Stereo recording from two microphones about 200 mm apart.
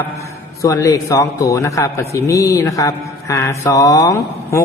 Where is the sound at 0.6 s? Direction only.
15° left (ahead or behind).